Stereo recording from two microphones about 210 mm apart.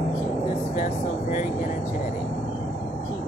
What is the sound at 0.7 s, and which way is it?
Speech, 40° left (ahead or behind).